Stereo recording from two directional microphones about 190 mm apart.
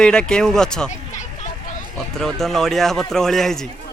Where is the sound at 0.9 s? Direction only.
40° left (ahead or behind).